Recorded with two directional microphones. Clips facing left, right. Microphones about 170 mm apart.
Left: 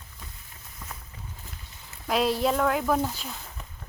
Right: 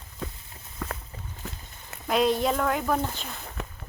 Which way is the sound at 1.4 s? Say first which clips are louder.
Right 8 dB; 80° right.